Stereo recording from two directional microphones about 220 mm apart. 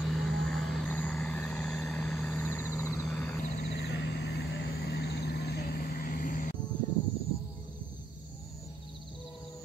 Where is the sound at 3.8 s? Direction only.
50° left (ahead or behind).